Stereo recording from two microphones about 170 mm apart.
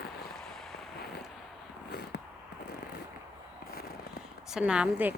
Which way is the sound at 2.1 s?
70° left (ahead or behind).